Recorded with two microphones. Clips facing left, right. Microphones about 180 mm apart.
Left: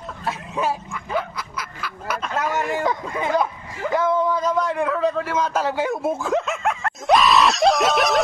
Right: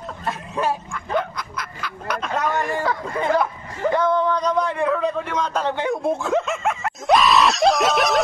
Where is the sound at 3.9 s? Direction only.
5° left (ahead or behind).